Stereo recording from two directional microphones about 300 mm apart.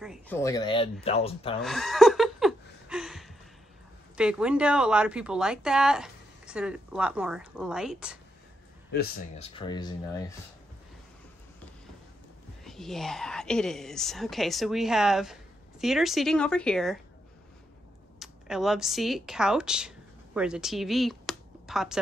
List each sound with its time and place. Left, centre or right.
0.0 s speech: centre
0.4 s speech: centre
1.6 s a sound: centre
4.2 s speech: centre
9.4 s speech: centre
12.6 s speech: centre
18.2 s speech: centre